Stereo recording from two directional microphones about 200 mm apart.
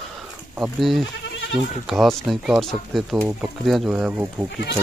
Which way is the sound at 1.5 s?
Centre (ahead or behind).